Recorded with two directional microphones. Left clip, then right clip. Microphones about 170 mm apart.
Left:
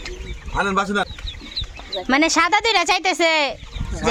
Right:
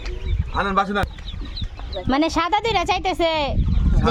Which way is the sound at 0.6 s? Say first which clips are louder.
Even; 30° left (ahead or behind).